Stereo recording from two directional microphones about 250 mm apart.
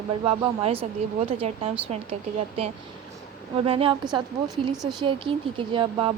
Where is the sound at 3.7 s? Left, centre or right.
Right.